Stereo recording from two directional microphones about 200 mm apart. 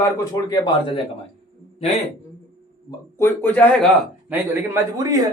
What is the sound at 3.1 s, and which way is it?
Speech, 10° left (ahead or behind).